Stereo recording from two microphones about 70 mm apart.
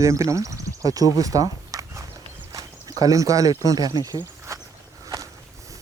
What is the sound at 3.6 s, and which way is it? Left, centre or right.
Speech, right.